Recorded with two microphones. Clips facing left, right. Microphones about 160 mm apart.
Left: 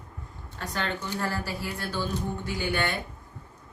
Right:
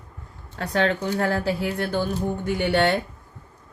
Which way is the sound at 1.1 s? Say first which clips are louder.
Right 8 dB; 60° right (ahead or behind).